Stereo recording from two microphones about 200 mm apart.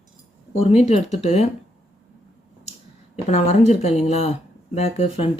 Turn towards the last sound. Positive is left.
turn(degrees=30)  # may be behind; listen again after turning